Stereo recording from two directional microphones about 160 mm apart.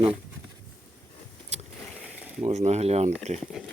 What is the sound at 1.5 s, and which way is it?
Vehicle, 45° right (ahead or behind).